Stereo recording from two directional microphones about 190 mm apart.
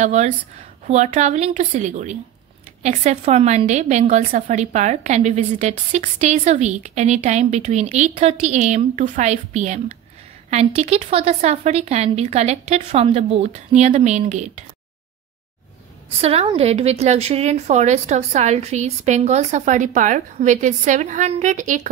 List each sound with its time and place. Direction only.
0.0 s a woman's voice: 35° right (ahead or behind)
16.2 s a woman's voice: 30° right (ahead or behind)